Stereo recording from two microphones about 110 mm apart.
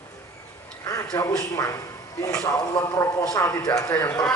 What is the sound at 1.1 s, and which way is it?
Speech, 25° left (ahead or behind).